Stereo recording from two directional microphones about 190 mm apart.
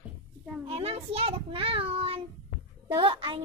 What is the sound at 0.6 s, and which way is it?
A child's voice, 30° right (ahead or behind).